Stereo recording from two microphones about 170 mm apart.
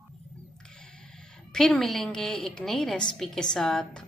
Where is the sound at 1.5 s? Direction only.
5° left (ahead or behind).